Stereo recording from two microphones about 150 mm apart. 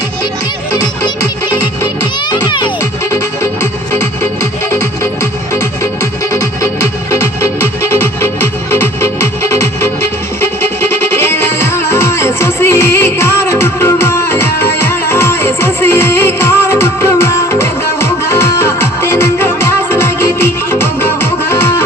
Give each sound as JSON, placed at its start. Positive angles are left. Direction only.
{"t": 2.3, "sound": "music", "side_deg": 30}
{"t": 3.1, "sound": "music", "side_deg": 15}